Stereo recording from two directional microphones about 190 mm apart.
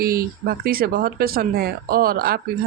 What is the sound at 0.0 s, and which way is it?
Speech, 50° right (ahead or behind).